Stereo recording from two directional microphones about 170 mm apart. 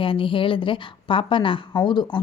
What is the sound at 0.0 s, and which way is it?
A woman's voice, 30° left (ahead or behind).